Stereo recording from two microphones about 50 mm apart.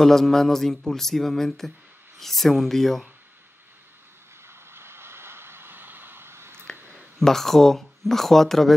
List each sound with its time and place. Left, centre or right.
0.0 s speech: centre
4.5 s vehicle: right
7.2 s speech: centre